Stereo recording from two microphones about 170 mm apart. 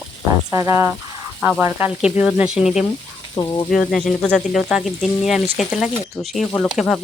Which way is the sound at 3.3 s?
20° left (ahead or behind).